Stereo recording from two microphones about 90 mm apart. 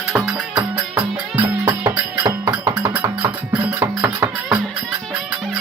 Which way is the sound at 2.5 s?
20° right (ahead or behind).